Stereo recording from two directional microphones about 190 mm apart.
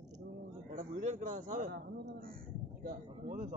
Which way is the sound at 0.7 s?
45° right (ahead or behind).